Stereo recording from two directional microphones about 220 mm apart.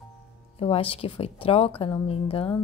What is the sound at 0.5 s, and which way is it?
Speech, 25° left (ahead or behind).